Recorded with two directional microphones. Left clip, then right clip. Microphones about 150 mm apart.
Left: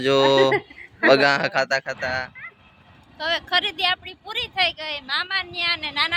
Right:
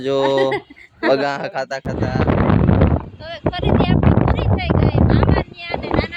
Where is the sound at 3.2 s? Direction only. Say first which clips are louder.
Left 4 dB; centre (ahead or behind).